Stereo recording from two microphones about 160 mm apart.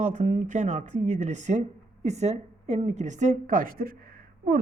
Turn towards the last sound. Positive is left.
turn(degrees=-60)  # may be behind; listen again after turning